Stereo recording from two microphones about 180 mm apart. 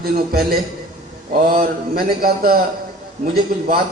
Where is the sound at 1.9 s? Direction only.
55° right (ahead or behind).